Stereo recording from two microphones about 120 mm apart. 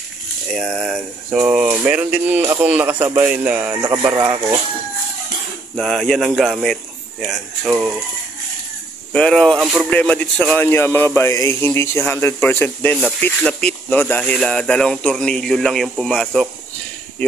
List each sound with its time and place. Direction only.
0.5 s speech: centre (ahead or behind)
3.8 s speech: 30° right (ahead or behind)
4.2 s speech: 15° right (ahead or behind)
5.8 s speech: centre (ahead or behind)
9.1 s speech: 5° left (ahead or behind)
9.6 s speech: 10° right (ahead or behind)
9.8 s speech: 10° left (ahead or behind)
17.2 s speech: 15° left (ahead or behind)